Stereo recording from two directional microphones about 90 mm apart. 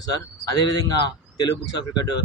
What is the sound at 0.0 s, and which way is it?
Speech, 45° left (ahead or behind).